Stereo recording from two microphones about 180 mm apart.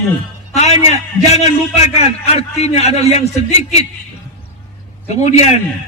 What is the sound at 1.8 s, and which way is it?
A man's voice, 35° left (ahead or behind).